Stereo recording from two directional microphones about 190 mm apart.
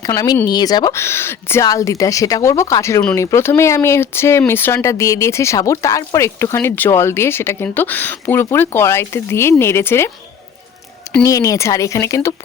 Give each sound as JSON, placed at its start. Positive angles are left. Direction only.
{"t": 0.0, "sound": "speech", "side_deg": 20}
{"t": 11.2, "sound": "speech", "side_deg": 15}